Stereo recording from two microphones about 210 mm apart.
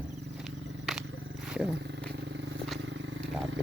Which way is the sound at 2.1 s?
55° right (ahead or behind).